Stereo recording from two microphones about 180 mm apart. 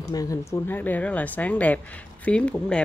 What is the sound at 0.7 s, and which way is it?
Speech, 10° left (ahead or behind).